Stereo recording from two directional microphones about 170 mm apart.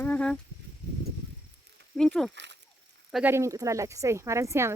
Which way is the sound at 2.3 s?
90° right.